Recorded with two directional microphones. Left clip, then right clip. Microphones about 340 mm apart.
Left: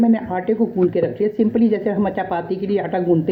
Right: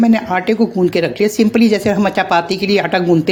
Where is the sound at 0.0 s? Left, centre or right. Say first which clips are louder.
Right 5 dB; right.